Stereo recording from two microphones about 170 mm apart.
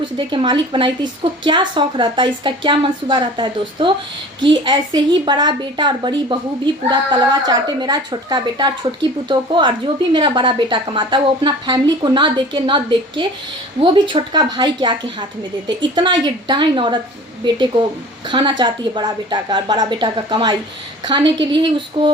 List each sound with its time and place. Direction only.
0.2 s speech: 30° right (ahead or behind)
18.3 s speech: 30° right (ahead or behind)